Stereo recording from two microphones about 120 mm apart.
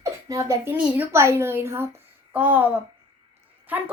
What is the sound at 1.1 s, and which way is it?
A woman's voice, 20° right (ahead or behind).